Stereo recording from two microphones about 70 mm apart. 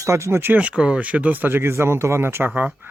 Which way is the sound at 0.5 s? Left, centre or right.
Centre.